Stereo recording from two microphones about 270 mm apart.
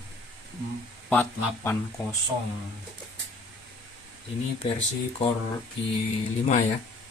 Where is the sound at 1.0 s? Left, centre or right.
Centre.